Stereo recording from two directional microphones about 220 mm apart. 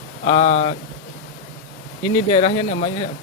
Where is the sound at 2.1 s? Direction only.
25° left (ahead or behind).